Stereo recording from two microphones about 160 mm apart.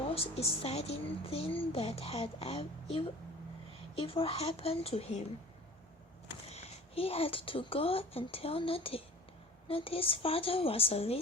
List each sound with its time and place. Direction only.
0.1 s a woman's voice: 40° left (ahead or behind)
6.5 s a woman's voice: 40° left (ahead or behind)